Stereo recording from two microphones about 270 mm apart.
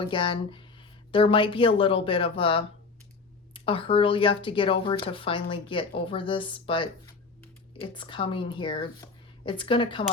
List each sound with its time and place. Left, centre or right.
0.0 s speech: centre